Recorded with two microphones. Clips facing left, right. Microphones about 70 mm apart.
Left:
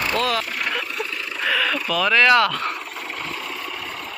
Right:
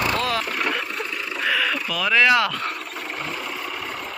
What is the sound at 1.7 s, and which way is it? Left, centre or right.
Speech, centre.